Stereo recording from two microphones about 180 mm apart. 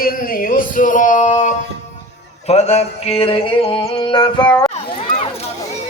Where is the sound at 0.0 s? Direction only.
55° left (ahead or behind); by 4.7 s 25° left (ahead or behind).